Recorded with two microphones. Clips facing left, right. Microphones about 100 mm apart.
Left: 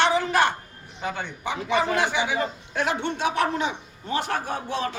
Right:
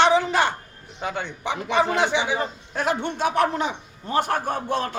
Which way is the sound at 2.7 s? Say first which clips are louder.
Right 2 dB; 45° right (ahead or behind).